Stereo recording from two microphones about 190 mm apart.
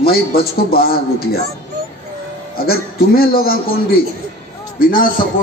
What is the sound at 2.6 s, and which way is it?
A man's voice, 50° left (ahead or behind).